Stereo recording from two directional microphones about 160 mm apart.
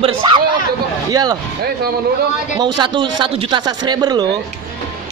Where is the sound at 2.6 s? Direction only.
30° right (ahead or behind).